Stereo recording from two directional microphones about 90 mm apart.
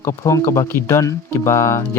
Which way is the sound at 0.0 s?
30° left (ahead or behind).